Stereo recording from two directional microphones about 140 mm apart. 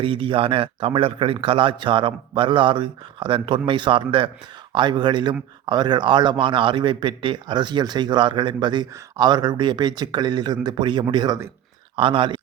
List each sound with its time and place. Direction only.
0.0 s speech: 40° right (ahead or behind)